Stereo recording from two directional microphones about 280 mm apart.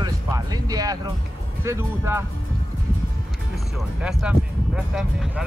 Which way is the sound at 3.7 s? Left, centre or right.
Centre.